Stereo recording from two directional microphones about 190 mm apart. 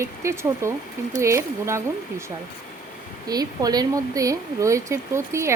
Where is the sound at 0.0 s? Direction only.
15° right (ahead or behind).